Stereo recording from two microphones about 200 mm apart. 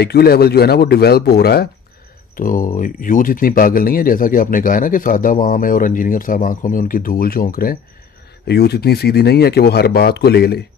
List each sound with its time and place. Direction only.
0.0 s speech: 50° left (ahead or behind)
8.5 s speech: 55° left (ahead or behind)